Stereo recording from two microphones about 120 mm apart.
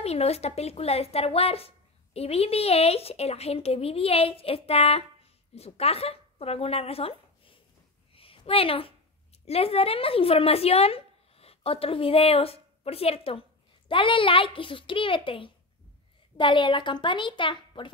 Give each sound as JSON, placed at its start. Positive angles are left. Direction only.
{"t": 0.0, "sound": "speech", "side_deg": 60}
{"t": 8.1, "sound": "a sound", "side_deg": 50}
{"t": 9.5, "sound": "a woman's voice", "side_deg": 55}